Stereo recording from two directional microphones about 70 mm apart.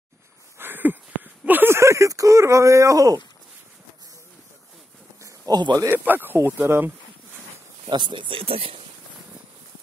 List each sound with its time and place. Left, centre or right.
0.6 s a sound: right
5.5 s speech: right
5.9 s speech: right